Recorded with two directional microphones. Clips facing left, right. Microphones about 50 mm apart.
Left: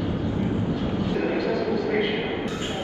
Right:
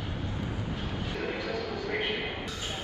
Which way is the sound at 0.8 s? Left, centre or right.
Left.